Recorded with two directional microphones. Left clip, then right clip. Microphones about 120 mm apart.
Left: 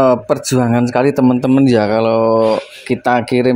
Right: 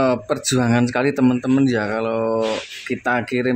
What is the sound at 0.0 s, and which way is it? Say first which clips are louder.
Speech: left 7 dB; 20° left (ahead or behind).